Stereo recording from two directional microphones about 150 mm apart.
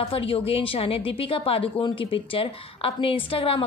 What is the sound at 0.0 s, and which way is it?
A woman's voice, 40° left (ahead or behind).